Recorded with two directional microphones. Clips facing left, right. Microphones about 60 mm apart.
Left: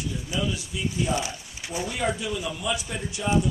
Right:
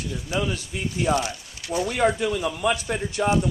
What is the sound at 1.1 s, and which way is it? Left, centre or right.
Speech, left.